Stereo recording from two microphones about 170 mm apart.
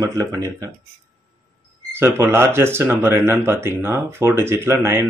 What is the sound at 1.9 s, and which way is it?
Speech, 15° right (ahead or behind).